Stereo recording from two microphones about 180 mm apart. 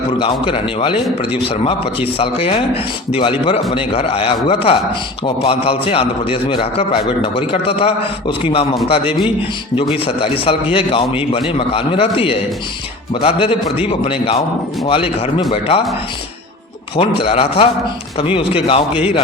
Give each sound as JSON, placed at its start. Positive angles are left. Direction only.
{"t": 0.2, "sound": "a man's voice", "side_deg": 30}
{"t": 9.9, "sound": "a man's voice", "side_deg": 30}
{"t": 17.0, "sound": "a man's voice", "side_deg": 30}